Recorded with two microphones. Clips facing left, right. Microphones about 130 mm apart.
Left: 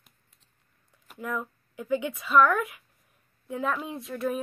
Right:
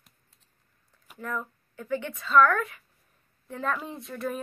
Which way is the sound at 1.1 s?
10° left (ahead or behind).